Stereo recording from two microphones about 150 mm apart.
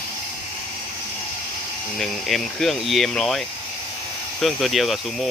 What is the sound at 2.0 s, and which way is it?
Speech, centre (ahead or behind).